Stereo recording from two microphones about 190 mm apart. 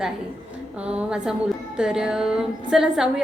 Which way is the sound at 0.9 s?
5° right (ahead or behind).